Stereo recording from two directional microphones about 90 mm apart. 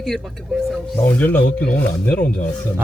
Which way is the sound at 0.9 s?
25° left (ahead or behind).